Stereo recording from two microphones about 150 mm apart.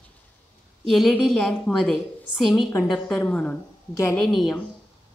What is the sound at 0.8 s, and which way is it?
A woman's voice, centre (ahead or behind).